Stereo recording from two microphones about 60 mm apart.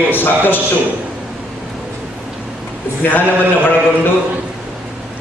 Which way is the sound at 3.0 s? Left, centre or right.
Left.